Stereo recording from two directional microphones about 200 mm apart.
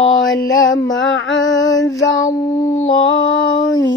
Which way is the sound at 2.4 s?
35° left (ahead or behind).